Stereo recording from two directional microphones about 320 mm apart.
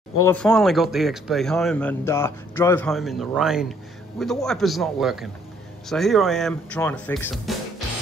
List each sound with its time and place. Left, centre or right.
0.2 s speech: centre